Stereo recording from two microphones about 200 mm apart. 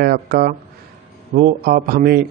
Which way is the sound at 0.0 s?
50° right (ahead or behind).